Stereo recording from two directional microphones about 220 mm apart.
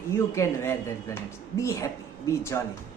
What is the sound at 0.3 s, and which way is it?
A woman's voice, 10° left (ahead or behind).